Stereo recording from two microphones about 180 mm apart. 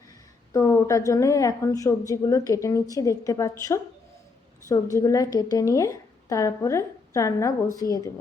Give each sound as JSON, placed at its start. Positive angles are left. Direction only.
{"t": 0.5, "sound": "a woman's voice", "side_deg": 15}
{"t": 4.7, "sound": "a woman's voice", "side_deg": 15}